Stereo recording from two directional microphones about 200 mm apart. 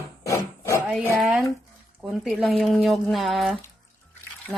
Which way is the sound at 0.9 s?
Centre (ahead or behind).